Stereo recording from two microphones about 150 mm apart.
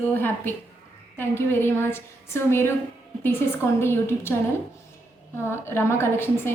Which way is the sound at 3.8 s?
15° left (ahead or behind).